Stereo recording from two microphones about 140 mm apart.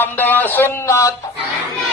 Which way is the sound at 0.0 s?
15° left (ahead or behind).